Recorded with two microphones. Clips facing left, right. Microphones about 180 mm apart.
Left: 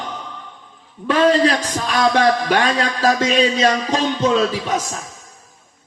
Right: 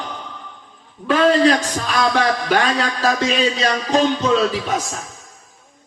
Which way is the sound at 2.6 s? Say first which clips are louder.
Left 2 dB; 40° left (ahead or behind).